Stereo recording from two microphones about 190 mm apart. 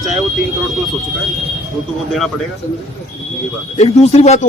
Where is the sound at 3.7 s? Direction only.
35° left (ahead or behind).